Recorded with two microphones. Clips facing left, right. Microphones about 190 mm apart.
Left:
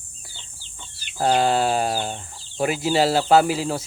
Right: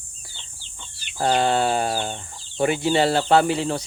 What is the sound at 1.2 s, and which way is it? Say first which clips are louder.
Speech: left 1 dB; 5° left (ahead or behind).